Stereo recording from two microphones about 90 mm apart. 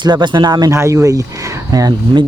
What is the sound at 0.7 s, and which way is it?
Speech, 35° right (ahead or behind).